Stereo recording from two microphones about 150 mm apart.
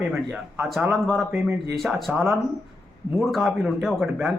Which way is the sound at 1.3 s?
15° right (ahead or behind).